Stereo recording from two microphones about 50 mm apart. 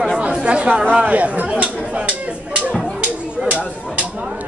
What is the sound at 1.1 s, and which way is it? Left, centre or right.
Speech, right.